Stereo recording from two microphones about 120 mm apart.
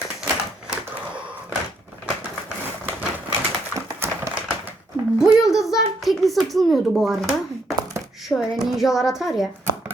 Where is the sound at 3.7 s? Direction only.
25° right (ahead or behind).